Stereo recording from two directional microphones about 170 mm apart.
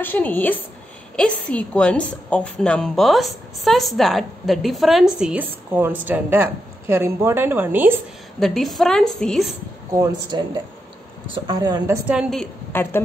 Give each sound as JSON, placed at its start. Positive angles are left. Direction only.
{"t": 0.0, "sound": "a woman's voice", "side_deg": 10}
{"t": 8.4, "sound": "a woman's voice", "side_deg": 0}
{"t": 9.9, "sound": "speech", "side_deg": -20}
{"t": 12.1, "sound": "a woman's voice", "side_deg": 0}